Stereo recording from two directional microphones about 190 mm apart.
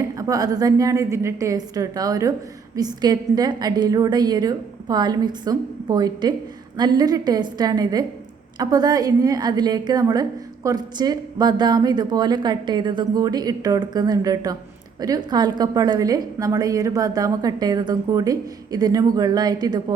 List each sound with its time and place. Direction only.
0.2 s a woman's voice: 20° right (ahead or behind)